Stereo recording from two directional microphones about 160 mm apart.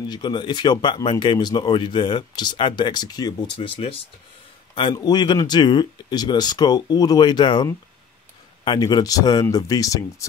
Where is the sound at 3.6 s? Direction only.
35° left (ahead or behind).